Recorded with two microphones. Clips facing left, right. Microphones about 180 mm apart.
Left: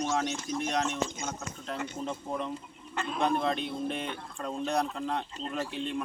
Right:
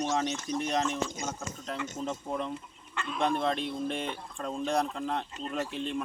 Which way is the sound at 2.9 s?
45° left (ahead or behind).